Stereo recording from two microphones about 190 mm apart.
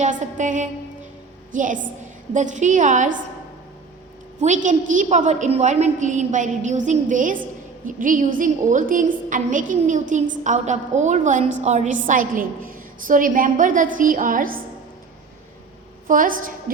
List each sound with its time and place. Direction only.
0.0 s a woman's voice: 40° right (ahead or behind)
4.4 s a woman's voice: 40° right (ahead or behind)
16.0 s a woman's voice: 45° right (ahead or behind)